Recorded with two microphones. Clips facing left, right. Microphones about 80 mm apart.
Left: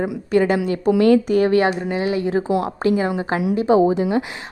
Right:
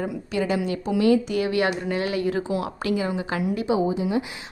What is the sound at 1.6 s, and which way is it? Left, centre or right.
Speech, left.